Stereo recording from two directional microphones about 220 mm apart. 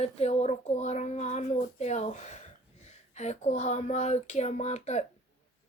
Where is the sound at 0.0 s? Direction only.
30° left (ahead or behind).